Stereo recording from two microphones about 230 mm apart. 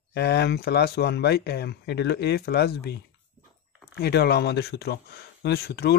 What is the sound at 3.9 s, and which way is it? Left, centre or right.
Speech, left.